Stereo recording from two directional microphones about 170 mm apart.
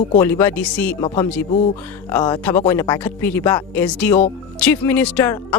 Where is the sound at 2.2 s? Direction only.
25° left (ahead or behind).